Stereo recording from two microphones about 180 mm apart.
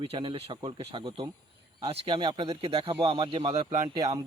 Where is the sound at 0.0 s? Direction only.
30° right (ahead or behind).